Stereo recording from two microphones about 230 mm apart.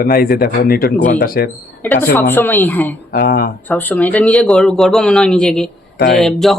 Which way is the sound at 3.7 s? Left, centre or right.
Centre.